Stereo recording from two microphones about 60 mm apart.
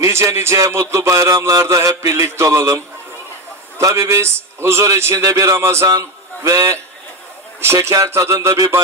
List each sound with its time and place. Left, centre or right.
0.1 s a man's voice: right
2.0 s a sound: right
3.8 s a man's voice: right
5.1 s a man's voice: right
6.0 s speech: right
7.8 s a sound: right